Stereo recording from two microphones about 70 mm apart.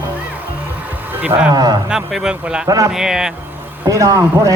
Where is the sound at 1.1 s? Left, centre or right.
Right.